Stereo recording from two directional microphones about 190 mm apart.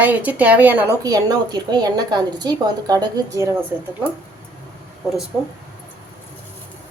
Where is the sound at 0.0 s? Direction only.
10° right (ahead or behind).